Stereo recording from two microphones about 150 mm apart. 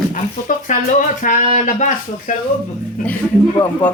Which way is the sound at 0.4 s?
60° left (ahead or behind).